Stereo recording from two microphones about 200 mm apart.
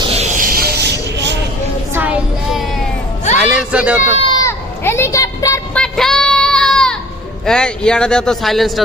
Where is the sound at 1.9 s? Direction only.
10° right (ahead or behind).